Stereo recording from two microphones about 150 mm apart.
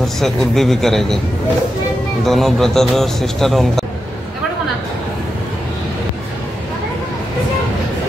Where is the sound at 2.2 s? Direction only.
Centre (ahead or behind).